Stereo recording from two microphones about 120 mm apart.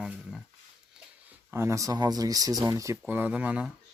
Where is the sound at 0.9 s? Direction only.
15° right (ahead or behind).